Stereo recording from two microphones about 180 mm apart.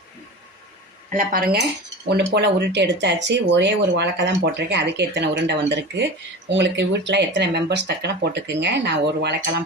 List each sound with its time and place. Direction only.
1.1 s speech: 55° right (ahead or behind)
2.0 s speech: 70° right (ahead or behind)